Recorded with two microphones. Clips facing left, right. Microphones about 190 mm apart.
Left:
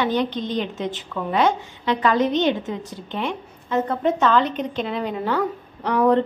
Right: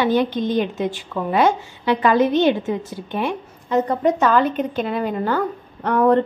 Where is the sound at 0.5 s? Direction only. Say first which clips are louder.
Right 5 dB; 55° right (ahead or behind).